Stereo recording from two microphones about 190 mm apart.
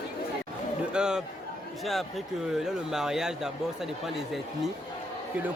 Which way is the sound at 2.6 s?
5° right (ahead or behind).